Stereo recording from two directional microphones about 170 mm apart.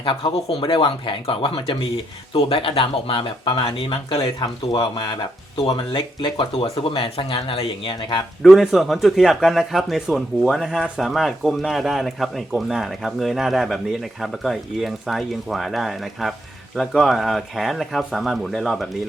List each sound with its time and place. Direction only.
0.0 s speech: 30° left (ahead or behind)
8.4 s a man's voice: centre (ahead or behind)